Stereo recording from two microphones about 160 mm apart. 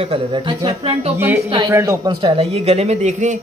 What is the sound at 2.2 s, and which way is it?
Speech, 40° right (ahead or behind).